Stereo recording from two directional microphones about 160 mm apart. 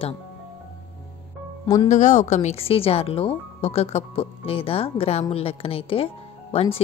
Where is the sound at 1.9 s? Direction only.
50° left (ahead or behind).